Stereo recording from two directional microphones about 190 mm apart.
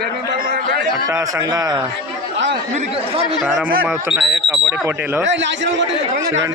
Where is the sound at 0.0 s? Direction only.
55° right (ahead or behind).